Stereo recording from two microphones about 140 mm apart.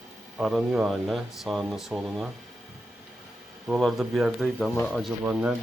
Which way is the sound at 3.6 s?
5° right (ahead or behind).